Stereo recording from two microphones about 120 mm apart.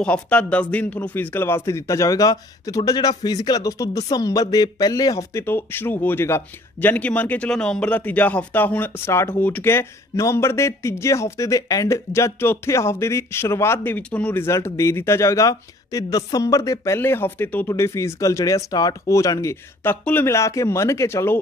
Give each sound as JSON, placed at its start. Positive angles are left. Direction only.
{"t": 0.0, "sound": "speech", "side_deg": 10}